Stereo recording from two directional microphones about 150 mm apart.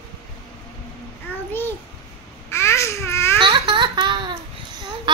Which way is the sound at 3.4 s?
30° right (ahead or behind).